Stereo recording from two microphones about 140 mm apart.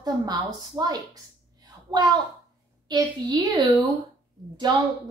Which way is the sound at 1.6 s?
30° right (ahead or behind).